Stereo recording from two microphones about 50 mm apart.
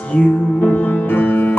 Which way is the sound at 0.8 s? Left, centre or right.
Left.